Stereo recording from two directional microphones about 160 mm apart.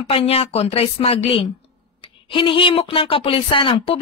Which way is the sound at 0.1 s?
40° left (ahead or behind).